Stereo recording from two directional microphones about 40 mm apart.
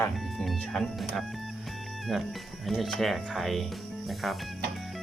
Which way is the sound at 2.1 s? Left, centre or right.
Centre.